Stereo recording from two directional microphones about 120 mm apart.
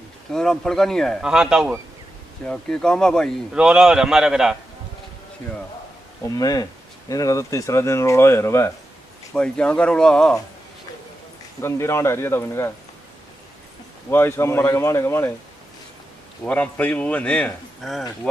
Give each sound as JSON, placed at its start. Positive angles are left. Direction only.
{"t": 0.3, "sound": "a man's voice", "side_deg": 5}
{"t": 1.2, "sound": "a man's voice", "side_deg": -5}
{"t": 2.4, "sound": "a man's voice", "side_deg": 5}
{"t": 3.5, "sound": "a man's voice", "side_deg": -5}
{"t": 6.2, "sound": "speech", "side_deg": 30}
{"t": 9.3, "sound": "speech", "side_deg": 10}
{"t": 11.6, "sound": "speech", "side_deg": 20}
{"t": 14.1, "sound": "speech", "side_deg": 20}
{"t": 16.4, "sound": "speech", "side_deg": 15}